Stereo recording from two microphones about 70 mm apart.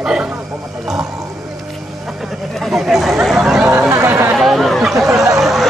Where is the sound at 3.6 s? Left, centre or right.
Right.